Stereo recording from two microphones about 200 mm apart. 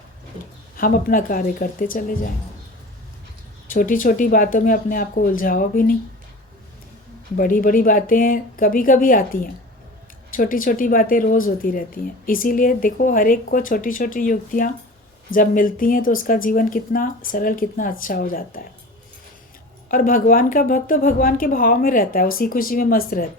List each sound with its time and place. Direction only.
0.8 s speech: 45° left (ahead or behind)
3.7 s speech: 45° left (ahead or behind)
7.3 s speech: 45° left (ahead or behind)
19.9 s speech: 45° left (ahead or behind)